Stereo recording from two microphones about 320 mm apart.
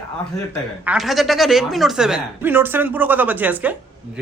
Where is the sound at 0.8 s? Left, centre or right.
Centre.